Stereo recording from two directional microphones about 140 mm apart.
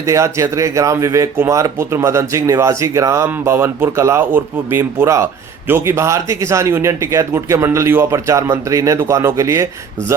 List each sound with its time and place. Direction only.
0.0 s speech: 20° right (ahead or behind)